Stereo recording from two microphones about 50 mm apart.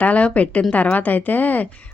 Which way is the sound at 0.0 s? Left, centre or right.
Left.